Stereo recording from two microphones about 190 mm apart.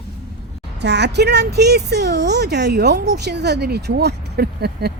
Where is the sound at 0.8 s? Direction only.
65° right (ahead or behind).